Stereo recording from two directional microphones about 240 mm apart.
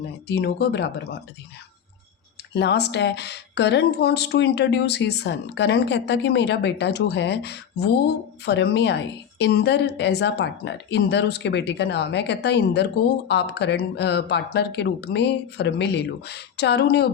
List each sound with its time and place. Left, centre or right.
0.3 s speech: left
2.6 s speech: left